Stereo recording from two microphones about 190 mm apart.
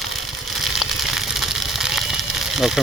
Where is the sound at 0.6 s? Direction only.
Centre (ahead or behind).